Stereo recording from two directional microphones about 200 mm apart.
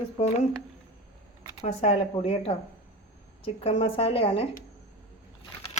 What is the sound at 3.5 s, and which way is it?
Speech, 25° left (ahead or behind).